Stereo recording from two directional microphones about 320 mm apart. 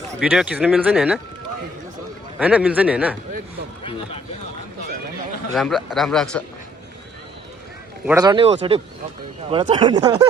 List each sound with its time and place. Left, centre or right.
0.2 s speech: centre
2.4 s speech: centre
3.8 s speech: centre
5.5 s speech: centre
8.0 s speech: centre